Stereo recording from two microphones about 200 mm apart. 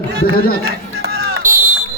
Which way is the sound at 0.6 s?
55° right (ahead or behind).